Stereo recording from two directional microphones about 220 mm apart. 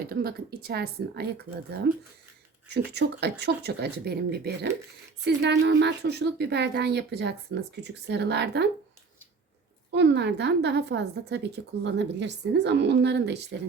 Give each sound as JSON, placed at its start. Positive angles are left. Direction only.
{"t": 0.1, "sound": "a woman's voice", "side_deg": -45}
{"t": 9.9, "sound": "a woman's voice", "side_deg": -50}